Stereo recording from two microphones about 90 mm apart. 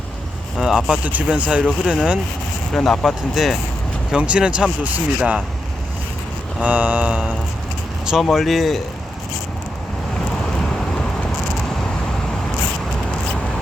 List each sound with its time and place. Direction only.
0.6 s speech: 5° right (ahead or behind)
2.7 s speech: 5° left (ahead or behind)
4.1 s speech: 10° right (ahead or behind)
6.6 s speech: 15° right (ahead or behind); by 8.8 s centre (ahead or behind)
10.6 s vehicle: 5° left (ahead or behind)